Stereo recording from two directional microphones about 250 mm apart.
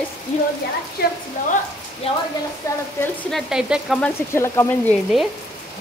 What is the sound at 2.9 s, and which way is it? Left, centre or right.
Speech, centre.